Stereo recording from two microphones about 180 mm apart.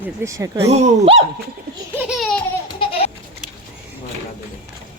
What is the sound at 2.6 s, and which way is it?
Baby laughter, 30° left (ahead or behind).